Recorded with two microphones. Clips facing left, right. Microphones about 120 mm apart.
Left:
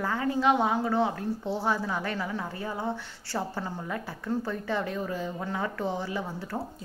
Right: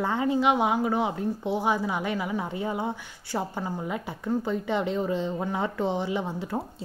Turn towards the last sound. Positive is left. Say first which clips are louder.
# right 4 dB
turn(degrees=-20)  # may be behind; listen again after turning